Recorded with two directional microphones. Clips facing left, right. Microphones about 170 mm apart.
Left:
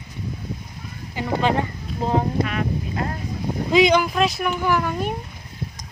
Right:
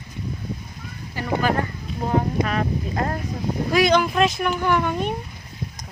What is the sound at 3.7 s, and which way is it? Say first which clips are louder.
Speech: left 3 dB; 20° left (ahead or behind).